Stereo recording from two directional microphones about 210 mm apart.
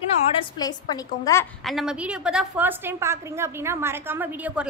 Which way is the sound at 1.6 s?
Centre (ahead or behind).